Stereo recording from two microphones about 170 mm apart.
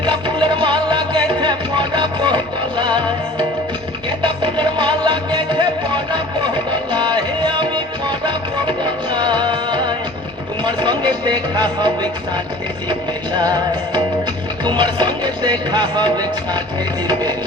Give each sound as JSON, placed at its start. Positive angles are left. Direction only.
{"t": 0.0, "sound": "music", "side_deg": -30}
{"t": 6.9, "sound": "music", "side_deg": -25}
{"t": 9.1, "sound": "music", "side_deg": -25}
{"t": 13.4, "sound": "music", "side_deg": -25}